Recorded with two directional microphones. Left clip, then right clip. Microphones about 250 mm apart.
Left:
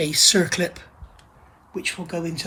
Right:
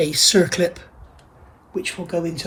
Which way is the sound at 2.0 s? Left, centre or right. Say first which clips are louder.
Right 5 dB; left.